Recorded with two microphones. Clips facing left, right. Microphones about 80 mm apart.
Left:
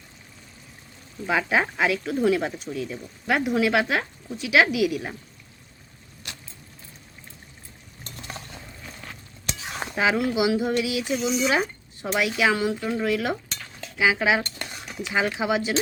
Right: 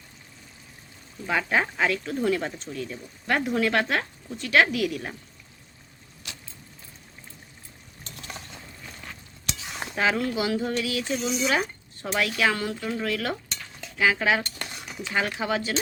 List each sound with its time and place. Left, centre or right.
1.3 s speech: centre
8.9 s a sound: centre
9.5 s stir: left
9.9 s speech: centre
12.0 s cutlery: centre
15.0 s speech: centre